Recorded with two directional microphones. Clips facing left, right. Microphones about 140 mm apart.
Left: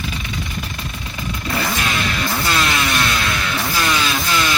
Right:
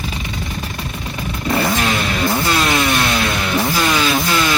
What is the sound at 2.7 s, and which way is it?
Vehicle, 25° right (ahead or behind).